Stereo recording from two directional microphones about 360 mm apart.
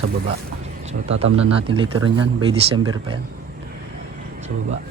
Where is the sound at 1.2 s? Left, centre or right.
Centre.